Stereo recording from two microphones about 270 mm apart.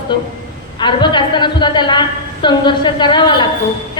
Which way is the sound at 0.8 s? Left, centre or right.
Centre.